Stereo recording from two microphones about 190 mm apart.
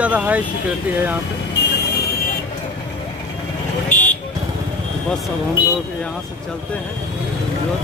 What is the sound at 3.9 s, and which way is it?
Vehicle, 10° left (ahead or behind).